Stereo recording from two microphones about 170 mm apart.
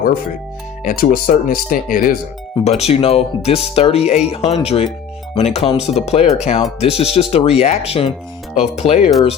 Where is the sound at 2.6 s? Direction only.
40° left (ahead or behind).